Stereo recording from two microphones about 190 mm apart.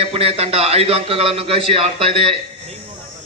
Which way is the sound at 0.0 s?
30° right (ahead or behind).